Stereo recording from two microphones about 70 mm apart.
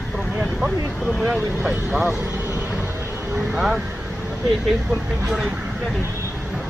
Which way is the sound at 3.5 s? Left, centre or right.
Centre.